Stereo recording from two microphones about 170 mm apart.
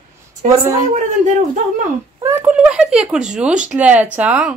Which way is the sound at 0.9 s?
45° right (ahead or behind).